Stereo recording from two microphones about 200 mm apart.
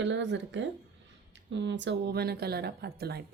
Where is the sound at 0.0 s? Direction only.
65° right (ahead or behind).